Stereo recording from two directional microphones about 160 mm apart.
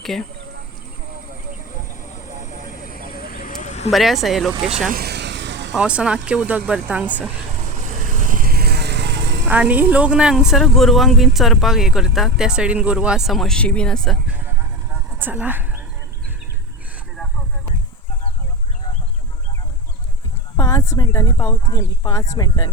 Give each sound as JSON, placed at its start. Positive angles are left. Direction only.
{"t": 0.0, "sound": "speech", "side_deg": 0}
{"t": 2.1, "sound": "a sound", "side_deg": 50}
{"t": 3.9, "sound": "a woman's voice", "side_deg": 0}
{"t": 4.5, "sound": "speech", "side_deg": -35}
{"t": 4.9, "sound": "vehicle", "side_deg": -80}
{"t": 5.7, "sound": "speech", "side_deg": -5}
{"t": 7.6, "sound": "vehicle", "side_deg": -55}
{"t": 9.5, "sound": "a woman's voice", "side_deg": -10}
{"t": 14.3, "sound": "vehicle", "side_deg": -10}
{"t": 15.2, "sound": "speech", "side_deg": -10}
{"t": 20.6, "sound": "speech", "side_deg": 20}